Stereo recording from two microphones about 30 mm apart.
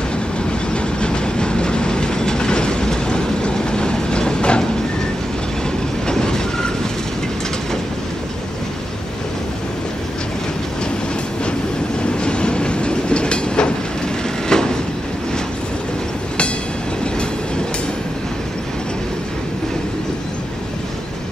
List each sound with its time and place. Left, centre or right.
0.7 s train: left
6.0 s train: left
12.2 s train: left
14.5 s train: left